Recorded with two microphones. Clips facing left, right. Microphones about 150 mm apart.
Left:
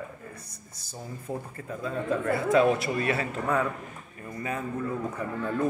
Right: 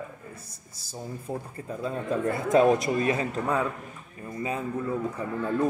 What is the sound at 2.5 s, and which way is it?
Speech, 45° right (ahead or behind).